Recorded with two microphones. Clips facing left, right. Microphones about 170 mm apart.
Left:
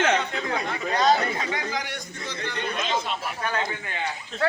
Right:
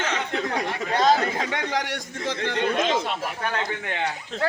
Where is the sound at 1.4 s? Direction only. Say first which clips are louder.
Right 3 dB; 70° right (ahead or behind); by 2.7 s 90° right.